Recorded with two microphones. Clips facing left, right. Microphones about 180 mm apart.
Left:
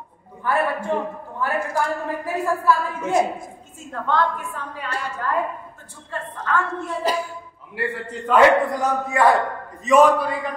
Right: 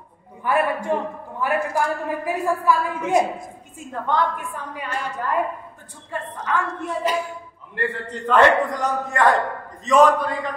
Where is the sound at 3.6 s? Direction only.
15° right (ahead or behind).